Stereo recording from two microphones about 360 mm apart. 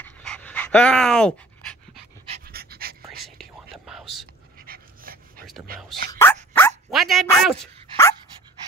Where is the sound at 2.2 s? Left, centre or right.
Right.